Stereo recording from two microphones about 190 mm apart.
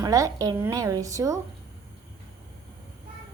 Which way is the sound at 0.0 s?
20° right (ahead or behind).